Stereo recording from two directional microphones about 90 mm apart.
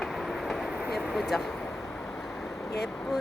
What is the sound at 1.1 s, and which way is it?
Speech, centre (ahead or behind).